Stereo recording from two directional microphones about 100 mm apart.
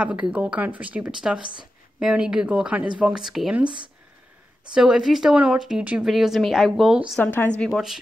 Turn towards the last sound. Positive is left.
turn(degrees=-5)  # may be behind; listen again after turning